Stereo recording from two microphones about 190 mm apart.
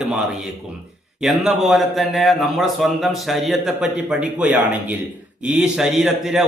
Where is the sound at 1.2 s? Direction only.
Centre (ahead or behind).